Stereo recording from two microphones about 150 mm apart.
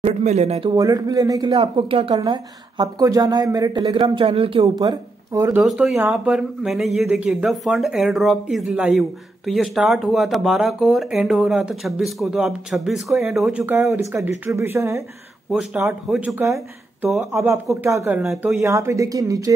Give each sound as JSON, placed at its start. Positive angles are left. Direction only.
{"t": 0.0, "sound": "speech", "side_deg": -45}
{"t": 0.7, "sound": "a woman's voice", "side_deg": -25}
{"t": 1.5, "sound": "a woman's voice", "side_deg": -40}
{"t": 3.8, "sound": "speech", "side_deg": -35}
{"t": 5.6, "sound": "speech", "side_deg": 0}
{"t": 15.5, "sound": "a woman's voice", "side_deg": 0}
{"t": 18.3, "sound": "speech", "side_deg": 0}
{"t": 18.6, "sound": "a woman's voice", "side_deg": -20}